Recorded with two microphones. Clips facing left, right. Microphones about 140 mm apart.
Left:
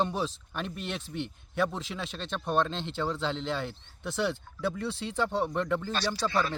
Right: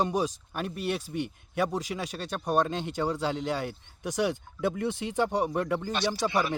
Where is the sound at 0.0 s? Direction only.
10° right (ahead or behind).